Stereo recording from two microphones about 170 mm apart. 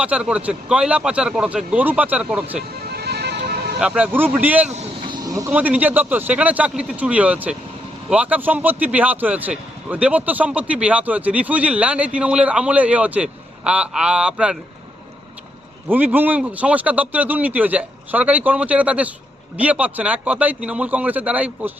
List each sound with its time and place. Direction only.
0.0 s speech: 5° right (ahead or behind)
2.9 s music: 70° right (ahead or behind)
3.8 s speech: 5° right (ahead or behind)
4.7 s vehicle: 40° right (ahead or behind)
5.1 s speech: 20° right (ahead or behind)
5.5 s speech: 10° right (ahead or behind)
15.9 s speech: 10° right (ahead or behind)